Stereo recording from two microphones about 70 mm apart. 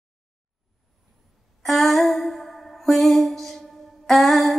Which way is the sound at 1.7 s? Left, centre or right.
Centre.